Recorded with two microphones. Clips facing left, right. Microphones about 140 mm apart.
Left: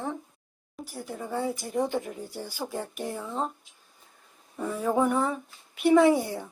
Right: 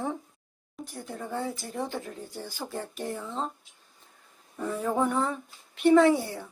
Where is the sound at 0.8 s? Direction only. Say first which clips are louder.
Left 1 dB; 5° left (ahead or behind).